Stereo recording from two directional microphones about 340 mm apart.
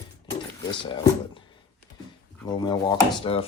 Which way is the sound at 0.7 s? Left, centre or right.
Centre.